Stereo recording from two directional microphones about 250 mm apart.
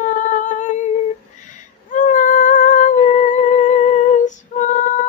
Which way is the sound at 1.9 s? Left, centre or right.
Left.